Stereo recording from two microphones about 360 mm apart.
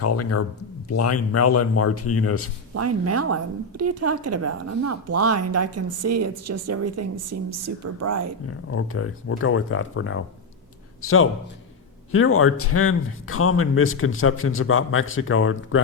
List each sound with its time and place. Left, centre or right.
0.0 s a man's voice: left
2.7 s a woman's voice: right
8.4 s a man's voice: left